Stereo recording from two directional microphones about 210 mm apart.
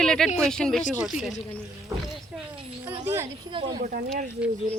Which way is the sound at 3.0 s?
10° right (ahead or behind).